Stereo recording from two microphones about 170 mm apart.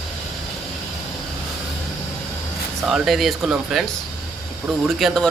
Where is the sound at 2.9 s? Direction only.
Centre (ahead or behind).